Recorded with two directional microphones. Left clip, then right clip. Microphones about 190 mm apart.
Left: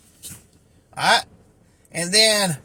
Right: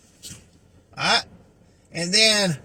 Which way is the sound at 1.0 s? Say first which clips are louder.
Left 3 dB; 60° left (ahead or behind).